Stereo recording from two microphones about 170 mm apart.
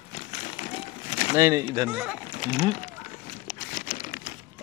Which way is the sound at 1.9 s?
5° right (ahead or behind).